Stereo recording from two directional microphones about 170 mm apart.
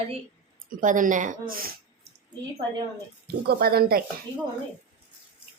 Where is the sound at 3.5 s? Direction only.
65° right (ahead or behind).